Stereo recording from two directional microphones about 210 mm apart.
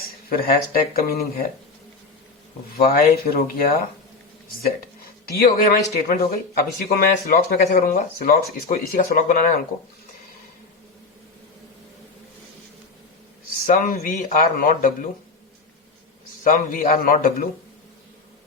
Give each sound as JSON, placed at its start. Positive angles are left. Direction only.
{"t": 0.3, "sound": "speech", "side_deg": 45}
{"t": 2.7, "sound": "speech", "side_deg": 45}
{"t": 5.3, "sound": "speech", "side_deg": 45}
{"t": 13.5, "sound": "speech", "side_deg": 45}
{"t": 16.4, "sound": "speech", "side_deg": 45}